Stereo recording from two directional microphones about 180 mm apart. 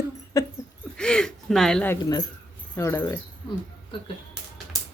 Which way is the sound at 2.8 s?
15° left (ahead or behind).